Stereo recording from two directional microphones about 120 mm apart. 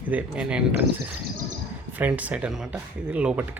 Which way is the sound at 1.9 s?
10° right (ahead or behind).